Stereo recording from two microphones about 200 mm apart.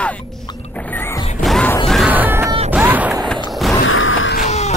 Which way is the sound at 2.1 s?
10° right (ahead or behind).